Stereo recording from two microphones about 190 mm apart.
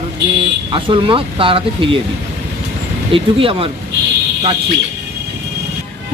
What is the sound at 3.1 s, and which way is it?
Speech, 30° right (ahead or behind).